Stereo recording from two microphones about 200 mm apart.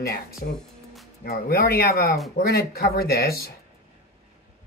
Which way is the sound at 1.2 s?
50° left (ahead or behind).